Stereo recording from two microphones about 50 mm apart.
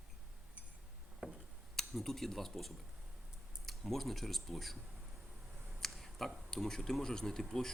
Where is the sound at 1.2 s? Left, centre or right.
Right.